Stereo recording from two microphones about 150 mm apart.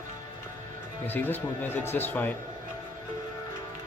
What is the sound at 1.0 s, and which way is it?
Speech, 15° left (ahead or behind).